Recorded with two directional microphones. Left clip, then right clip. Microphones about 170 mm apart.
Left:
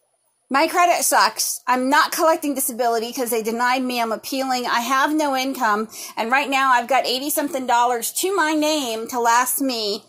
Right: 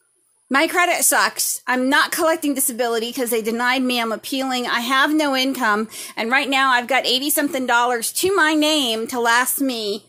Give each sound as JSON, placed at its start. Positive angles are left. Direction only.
{"t": 0.5, "sound": "speech", "side_deg": -30}
{"t": 9.7, "sound": "a woman's voice", "side_deg": -55}